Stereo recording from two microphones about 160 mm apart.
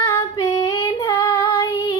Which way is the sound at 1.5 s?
25° left (ahead or behind).